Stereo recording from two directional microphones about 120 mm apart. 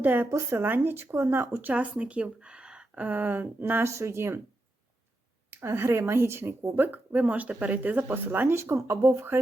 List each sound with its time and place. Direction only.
0.0 s speech: 20° right (ahead or behind)
5.5 s speech: 20° right (ahead or behind)